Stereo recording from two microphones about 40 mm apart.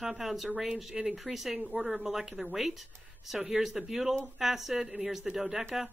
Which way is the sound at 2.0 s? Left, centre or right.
Centre.